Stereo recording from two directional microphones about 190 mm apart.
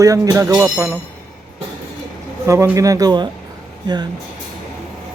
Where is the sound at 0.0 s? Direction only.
15° right (ahead or behind).